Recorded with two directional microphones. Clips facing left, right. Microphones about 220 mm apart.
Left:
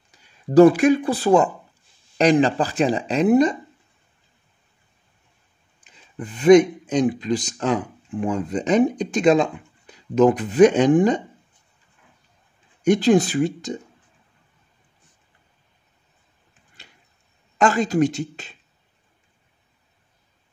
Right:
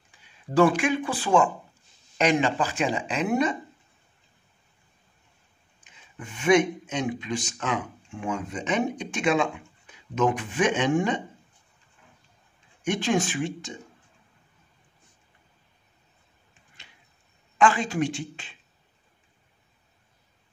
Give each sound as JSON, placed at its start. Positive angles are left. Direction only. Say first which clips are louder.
{"t": 0.1, "sound": "speech", "louder": "left 9 dB", "side_deg": 40}
{"t": 6.1, "sound": "speech", "louder": "left 8 dB", "side_deg": 35}
{"t": 12.8, "sound": "speech", "louder": "left 9 dB", "side_deg": 35}
{"t": 17.6, "sound": "speech", "louder": "left 5 dB", "side_deg": 40}